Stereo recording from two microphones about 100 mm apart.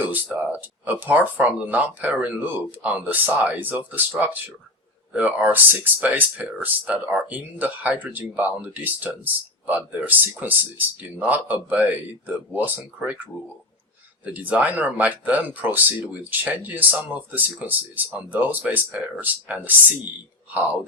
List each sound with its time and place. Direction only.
0.0 s speech: 15° right (ahead or behind)
14.3 s speech: 15° right (ahead or behind)